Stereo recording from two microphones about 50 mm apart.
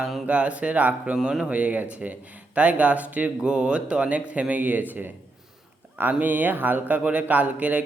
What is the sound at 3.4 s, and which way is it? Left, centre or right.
Speech, centre.